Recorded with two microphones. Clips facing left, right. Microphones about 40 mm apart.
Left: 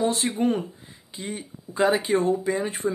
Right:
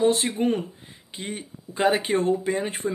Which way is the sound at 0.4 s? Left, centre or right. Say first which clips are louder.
Even; right.